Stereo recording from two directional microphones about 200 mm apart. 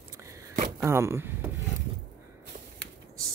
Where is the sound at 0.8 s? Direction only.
15° right (ahead or behind).